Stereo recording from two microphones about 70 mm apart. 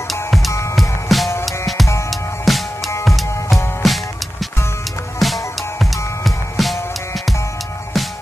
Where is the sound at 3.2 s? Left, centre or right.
Left.